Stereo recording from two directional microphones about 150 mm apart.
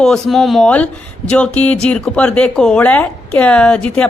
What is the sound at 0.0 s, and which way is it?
A woman's voice, centre (ahead or behind).